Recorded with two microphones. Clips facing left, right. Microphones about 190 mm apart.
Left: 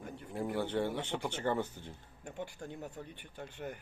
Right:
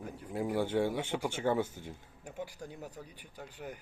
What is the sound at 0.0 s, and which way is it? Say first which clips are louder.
Speech: right 2 dB; centre (ahead or behind).